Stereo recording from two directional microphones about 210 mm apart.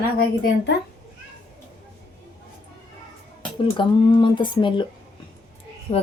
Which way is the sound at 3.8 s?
25° left (ahead or behind).